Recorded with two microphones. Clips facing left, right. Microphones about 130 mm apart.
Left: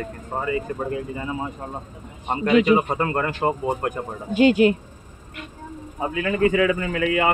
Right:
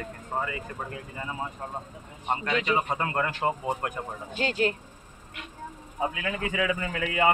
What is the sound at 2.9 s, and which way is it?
Speech, 45° left (ahead or behind).